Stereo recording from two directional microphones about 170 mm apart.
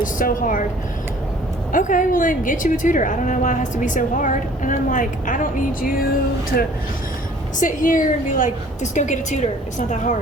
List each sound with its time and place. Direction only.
0.0 s a woman's voice: 55° left (ahead or behind)
1.7 s a woman's voice: 50° left (ahead or behind)
7.6 s a woman's voice: 50° left (ahead or behind)